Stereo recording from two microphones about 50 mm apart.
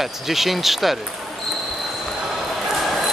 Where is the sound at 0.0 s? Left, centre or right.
Centre.